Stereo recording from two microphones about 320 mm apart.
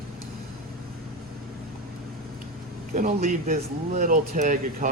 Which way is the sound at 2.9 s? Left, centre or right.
Right.